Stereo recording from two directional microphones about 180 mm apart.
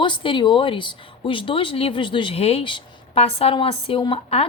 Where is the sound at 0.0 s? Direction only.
25° left (ahead or behind).